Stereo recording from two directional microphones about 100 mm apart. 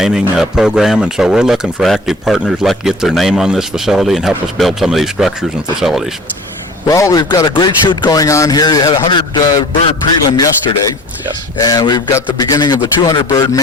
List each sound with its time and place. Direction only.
0.0 s speech: 5° right (ahead or behind)
6.8 s speech: 35° left (ahead or behind)
7.5 s speech: 50° left (ahead or behind); by 9.0 s 35° left (ahead or behind)
9.0 s a man's voice: 50° left (ahead or behind)
11.5 s speech: 40° left (ahead or behind)